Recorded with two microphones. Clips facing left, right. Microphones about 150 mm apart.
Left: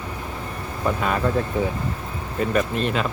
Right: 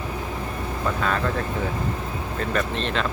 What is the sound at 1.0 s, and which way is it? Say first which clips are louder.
Speech: left 2 dB; 10° left (ahead or behind).